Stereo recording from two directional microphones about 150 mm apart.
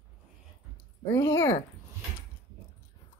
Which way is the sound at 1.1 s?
20° left (ahead or behind).